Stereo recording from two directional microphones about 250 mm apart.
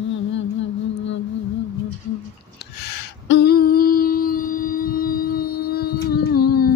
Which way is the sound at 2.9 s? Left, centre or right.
Left.